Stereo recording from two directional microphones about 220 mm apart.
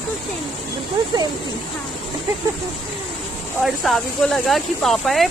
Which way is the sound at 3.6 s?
Centre (ahead or behind).